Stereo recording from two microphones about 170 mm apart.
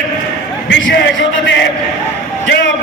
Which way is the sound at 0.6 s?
90° left.